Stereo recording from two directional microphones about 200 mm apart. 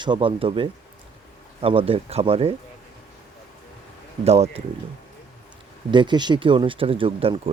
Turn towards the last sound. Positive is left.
turn(degrees=-30)  # may be behind; listen again after turning